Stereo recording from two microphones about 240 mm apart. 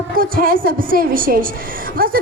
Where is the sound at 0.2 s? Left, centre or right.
Right.